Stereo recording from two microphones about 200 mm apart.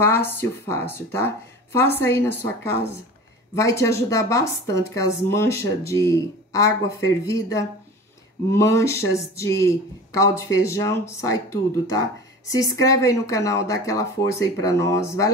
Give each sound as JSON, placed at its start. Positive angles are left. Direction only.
{"t": 0.0, "sound": "speech", "side_deg": 10}